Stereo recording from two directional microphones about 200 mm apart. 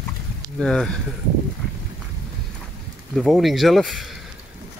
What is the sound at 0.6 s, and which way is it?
Speech, 5° left (ahead or behind).